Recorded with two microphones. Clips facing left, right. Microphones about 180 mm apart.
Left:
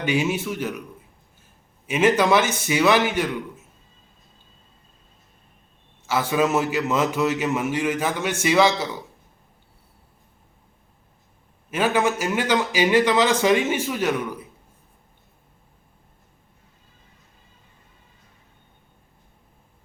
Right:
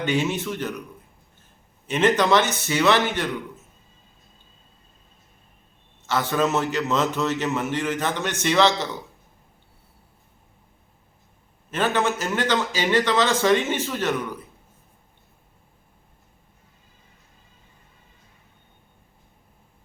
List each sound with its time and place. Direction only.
0.0 s a man's voice: 10° left (ahead or behind)
1.9 s a man's voice: 10° left (ahead or behind)
6.1 s a man's voice: 10° left (ahead or behind)
11.7 s a man's voice: 10° left (ahead or behind)